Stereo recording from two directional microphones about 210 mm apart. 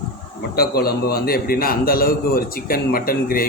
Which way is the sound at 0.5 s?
45° left (ahead or behind).